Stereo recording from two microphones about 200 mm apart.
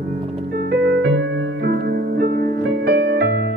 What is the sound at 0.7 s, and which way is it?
Music, 55° right (ahead or behind).